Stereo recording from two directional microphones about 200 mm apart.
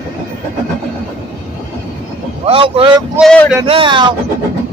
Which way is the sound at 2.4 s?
30° right (ahead or behind).